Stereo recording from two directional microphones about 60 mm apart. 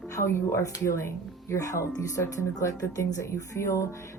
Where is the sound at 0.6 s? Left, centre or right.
Left.